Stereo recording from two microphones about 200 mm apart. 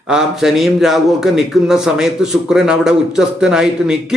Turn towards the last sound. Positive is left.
turn(degrees=-5)  # may be behind; listen again after turning